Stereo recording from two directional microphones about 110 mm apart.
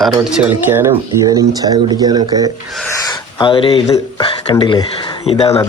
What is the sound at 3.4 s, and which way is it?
Speech, 55° left (ahead or behind).